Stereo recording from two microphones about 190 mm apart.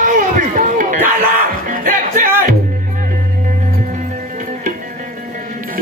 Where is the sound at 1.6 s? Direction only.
45° right (ahead or behind).